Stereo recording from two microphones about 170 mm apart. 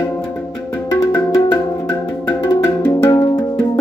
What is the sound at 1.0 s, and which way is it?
Music, 20° left (ahead or behind).